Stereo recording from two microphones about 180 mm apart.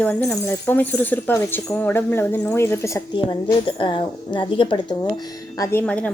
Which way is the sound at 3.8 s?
30° left (ahead or behind).